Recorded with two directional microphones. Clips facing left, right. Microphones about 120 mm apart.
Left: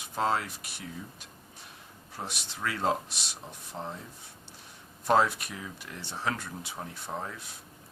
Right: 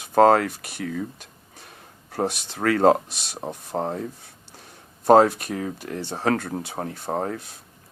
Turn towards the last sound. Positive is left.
turn(degrees=-50)  # may be behind; listen again after turning